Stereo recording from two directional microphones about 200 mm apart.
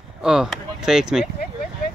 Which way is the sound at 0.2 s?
5° right (ahead or behind).